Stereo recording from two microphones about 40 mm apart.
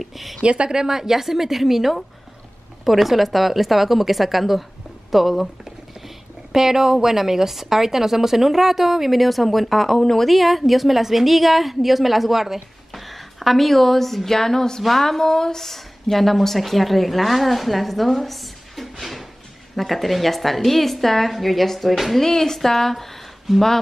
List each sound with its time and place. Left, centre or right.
0.0 s speech: centre
0.4 s speech: right
0.7 s a woman's voice: centre
6.0 s a woman's voice: centre